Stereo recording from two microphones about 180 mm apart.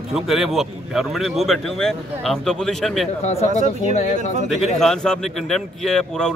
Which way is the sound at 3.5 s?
40° left (ahead or behind).